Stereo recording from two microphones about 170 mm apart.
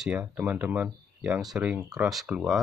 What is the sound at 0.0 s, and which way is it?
Speech, 10° right (ahead or behind).